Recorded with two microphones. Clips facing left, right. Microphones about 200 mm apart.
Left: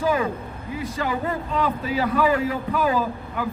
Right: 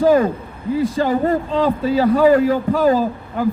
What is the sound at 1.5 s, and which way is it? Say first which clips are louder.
A man's voice: right 7 dB; 30° right (ahead or behind).